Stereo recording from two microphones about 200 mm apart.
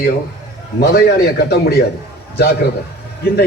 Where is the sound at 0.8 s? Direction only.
50° left (ahead or behind).